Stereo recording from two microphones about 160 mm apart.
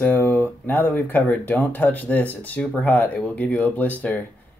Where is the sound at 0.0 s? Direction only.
10° left (ahead or behind).